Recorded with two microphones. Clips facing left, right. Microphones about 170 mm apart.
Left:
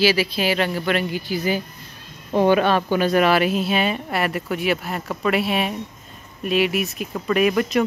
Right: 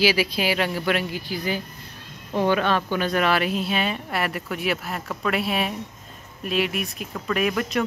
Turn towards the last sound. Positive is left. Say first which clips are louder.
# left 5 dB
turn(degrees=5)  # may be behind; listen again after turning